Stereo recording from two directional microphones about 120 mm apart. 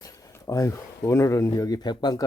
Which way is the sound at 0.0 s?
25° left (ahead or behind).